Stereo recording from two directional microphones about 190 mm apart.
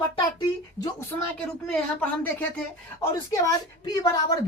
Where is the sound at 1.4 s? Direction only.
5° left (ahead or behind).